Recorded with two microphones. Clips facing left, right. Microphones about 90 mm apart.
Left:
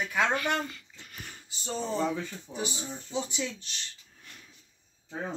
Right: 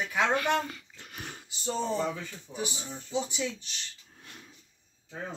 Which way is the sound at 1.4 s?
Centre (ahead or behind).